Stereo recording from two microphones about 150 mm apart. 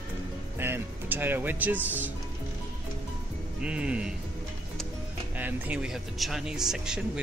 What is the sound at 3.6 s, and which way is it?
Speech, 5° right (ahead or behind).